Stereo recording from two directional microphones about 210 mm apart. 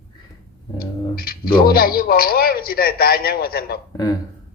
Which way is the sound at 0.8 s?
45° left (ahead or behind).